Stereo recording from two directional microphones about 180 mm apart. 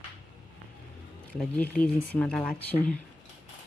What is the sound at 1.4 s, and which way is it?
Speech, 5° left (ahead or behind).